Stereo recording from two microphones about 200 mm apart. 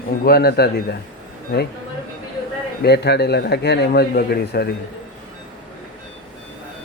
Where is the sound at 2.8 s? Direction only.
55° left (ahead or behind).